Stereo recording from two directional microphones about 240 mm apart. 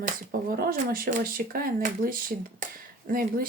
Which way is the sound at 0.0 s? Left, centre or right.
Right.